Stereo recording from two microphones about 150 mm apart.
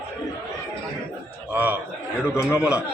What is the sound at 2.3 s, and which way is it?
Speech, 15° left (ahead or behind).